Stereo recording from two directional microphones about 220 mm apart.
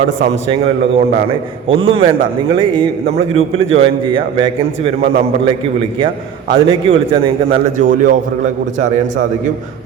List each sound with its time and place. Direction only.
0.5 s a man's voice: 25° right (ahead or behind)
6.5 s a man's voice: 25° right (ahead or behind)